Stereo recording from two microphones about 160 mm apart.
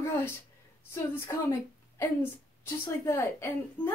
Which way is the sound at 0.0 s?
15° left (ahead or behind).